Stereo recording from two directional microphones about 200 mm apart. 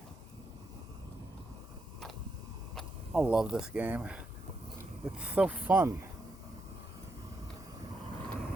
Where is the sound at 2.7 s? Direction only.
Centre (ahead or behind).